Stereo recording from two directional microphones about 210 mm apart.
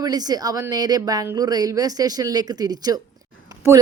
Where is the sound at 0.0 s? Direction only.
20° right (ahead or behind).